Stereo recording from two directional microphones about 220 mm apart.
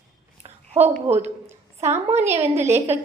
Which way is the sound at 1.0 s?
30° right (ahead or behind).